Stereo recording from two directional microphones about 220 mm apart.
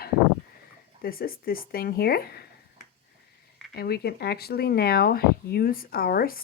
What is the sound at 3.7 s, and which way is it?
Speech, 45° left (ahead or behind).